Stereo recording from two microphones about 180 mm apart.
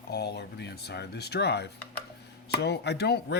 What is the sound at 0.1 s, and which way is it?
Speech, 65° left (ahead or behind).